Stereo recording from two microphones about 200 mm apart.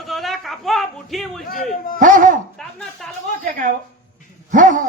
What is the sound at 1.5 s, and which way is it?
Speech, 45° left (ahead or behind).